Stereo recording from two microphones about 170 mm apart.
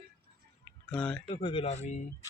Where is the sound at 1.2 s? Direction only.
30° left (ahead or behind).